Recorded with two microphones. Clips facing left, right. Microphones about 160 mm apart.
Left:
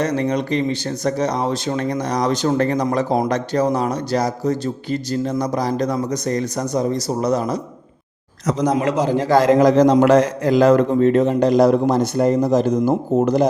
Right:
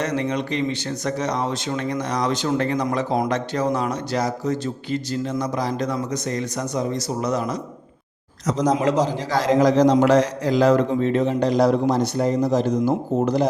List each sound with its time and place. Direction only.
0.0 s speech: 35° left (ahead or behind)
8.7 s a man's voice: 60° left (ahead or behind)